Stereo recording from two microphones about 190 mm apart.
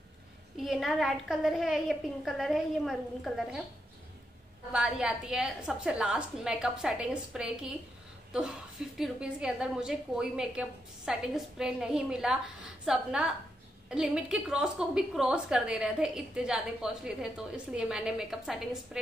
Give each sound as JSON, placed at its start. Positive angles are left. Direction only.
{"t": 0.6, "sound": "a woman's voice", "side_deg": 0}
{"t": 4.7, "sound": "a woman's voice", "side_deg": -5}